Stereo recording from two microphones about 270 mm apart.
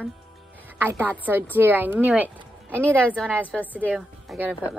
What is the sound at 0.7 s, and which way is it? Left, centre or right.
A woman's voice, centre.